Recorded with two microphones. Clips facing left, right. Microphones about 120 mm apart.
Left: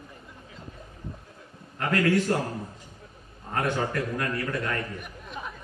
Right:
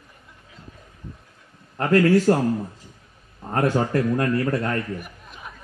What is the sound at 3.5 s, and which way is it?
A man's voice, 35° right (ahead or behind).